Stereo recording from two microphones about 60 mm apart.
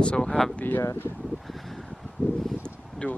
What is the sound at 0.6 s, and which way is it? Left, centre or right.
Speech, left.